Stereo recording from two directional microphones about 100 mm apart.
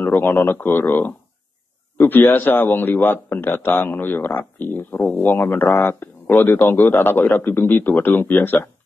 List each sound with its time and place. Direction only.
0.0 s a man's voice: 20° left (ahead or behind)
4.9 s speech: 5° left (ahead or behind)
5.2 s a man's voice: 20° left (ahead or behind)